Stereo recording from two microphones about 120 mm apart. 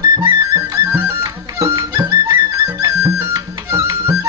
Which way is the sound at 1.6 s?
25° right (ahead or behind).